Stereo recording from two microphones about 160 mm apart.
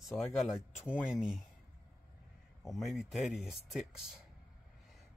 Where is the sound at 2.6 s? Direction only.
Centre (ahead or behind).